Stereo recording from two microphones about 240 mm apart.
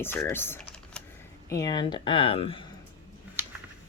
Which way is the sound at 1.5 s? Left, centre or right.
Centre.